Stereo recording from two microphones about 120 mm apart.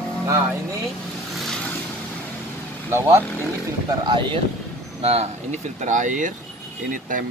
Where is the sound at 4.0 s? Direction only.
40° right (ahead or behind).